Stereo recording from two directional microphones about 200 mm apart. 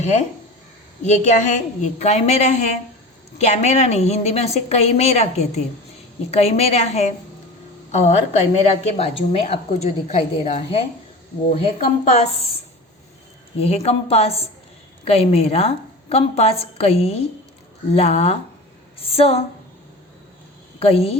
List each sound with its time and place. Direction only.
1.0 s a woman's voice: 35° left (ahead or behind)
13.6 s a woman's voice: 30° left (ahead or behind)
18.9 s a sound: 30° left (ahead or behind)
20.7 s a woman's voice: 30° left (ahead or behind)